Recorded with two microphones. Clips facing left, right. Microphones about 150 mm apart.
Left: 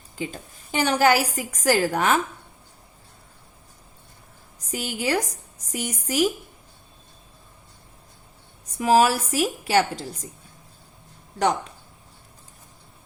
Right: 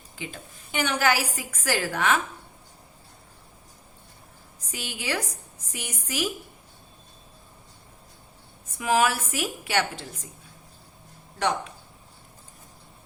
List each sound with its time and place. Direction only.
0.2 s a woman's voice: 40° left (ahead or behind)
4.7 s a woman's voice: 40° left (ahead or behind)
8.8 s a woman's voice: 35° left (ahead or behind)